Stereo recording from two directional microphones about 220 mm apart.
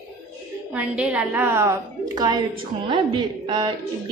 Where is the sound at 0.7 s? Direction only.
5° right (ahead or behind).